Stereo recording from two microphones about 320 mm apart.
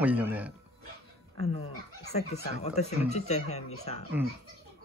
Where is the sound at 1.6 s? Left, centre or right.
Left.